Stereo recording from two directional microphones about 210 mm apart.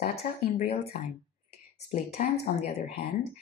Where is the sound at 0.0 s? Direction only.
30° left (ahead or behind).